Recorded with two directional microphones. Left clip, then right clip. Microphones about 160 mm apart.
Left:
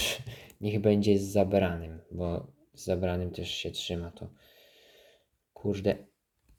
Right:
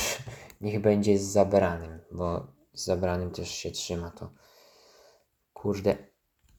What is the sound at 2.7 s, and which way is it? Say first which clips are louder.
Speech: right 3 dB; 35° left (ahead or behind).